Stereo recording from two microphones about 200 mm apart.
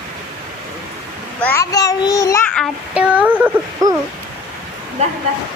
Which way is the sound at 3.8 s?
20° right (ahead or behind).